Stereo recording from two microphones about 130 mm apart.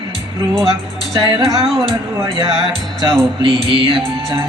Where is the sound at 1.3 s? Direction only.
Centre (ahead or behind).